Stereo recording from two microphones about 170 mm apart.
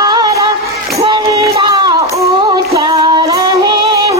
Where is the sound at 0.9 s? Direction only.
35° right (ahead or behind).